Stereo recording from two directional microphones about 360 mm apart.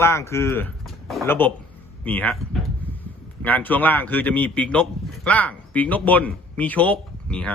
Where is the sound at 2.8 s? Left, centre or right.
Centre.